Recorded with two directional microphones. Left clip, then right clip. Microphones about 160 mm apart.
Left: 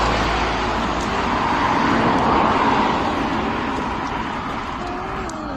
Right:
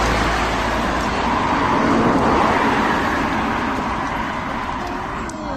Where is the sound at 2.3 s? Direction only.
5° left (ahead or behind); by 5.0 s 20° right (ahead or behind).